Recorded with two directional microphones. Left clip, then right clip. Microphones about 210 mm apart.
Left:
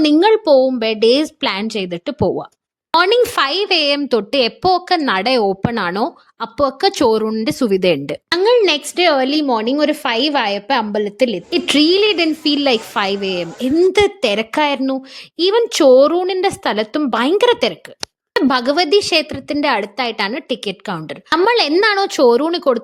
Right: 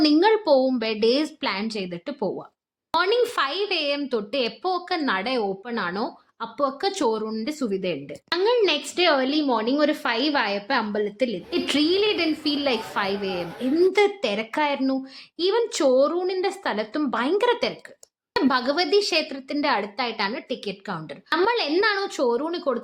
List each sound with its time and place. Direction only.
0.0 s a woman's voice: 30° left (ahead or behind)